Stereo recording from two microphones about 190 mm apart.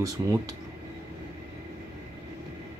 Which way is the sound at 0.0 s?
20° right (ahead or behind).